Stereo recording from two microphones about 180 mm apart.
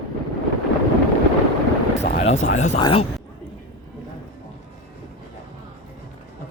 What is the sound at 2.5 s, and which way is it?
Speech, 40° left (ahead or behind).